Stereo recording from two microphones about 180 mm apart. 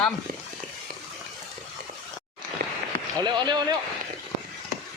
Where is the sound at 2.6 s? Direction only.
65° right (ahead or behind).